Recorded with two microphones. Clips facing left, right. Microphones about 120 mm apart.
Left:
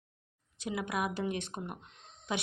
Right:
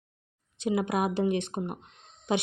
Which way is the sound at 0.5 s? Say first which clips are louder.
Right 7 dB; 25° right (ahead or behind).